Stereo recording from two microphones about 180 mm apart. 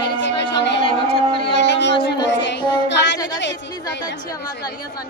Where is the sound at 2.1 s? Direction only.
80° left.